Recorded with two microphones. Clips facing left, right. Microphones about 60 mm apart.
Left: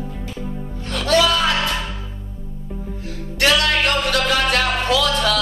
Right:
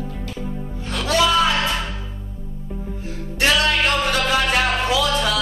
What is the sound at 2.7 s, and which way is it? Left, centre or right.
Music, centre.